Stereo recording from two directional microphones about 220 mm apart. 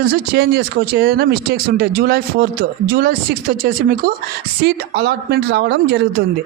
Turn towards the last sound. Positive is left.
turn(degrees=-50)  # may be behind; listen again after turning